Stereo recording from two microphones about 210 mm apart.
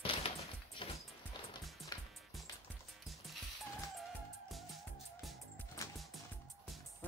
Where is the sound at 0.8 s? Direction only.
25° left (ahead or behind).